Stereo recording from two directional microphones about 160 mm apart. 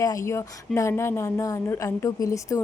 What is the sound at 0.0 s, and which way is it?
A woman's voice, 20° left (ahead or behind).